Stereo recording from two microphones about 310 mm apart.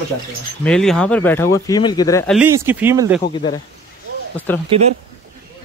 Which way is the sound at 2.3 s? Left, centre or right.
Centre.